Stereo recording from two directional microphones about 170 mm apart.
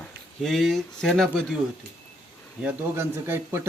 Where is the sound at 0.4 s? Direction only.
Centre (ahead or behind).